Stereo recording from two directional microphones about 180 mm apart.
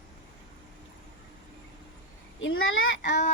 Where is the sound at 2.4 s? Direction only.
90° left.